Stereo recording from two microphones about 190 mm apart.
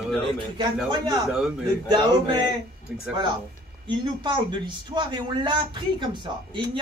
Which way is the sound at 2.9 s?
5° right (ahead or behind).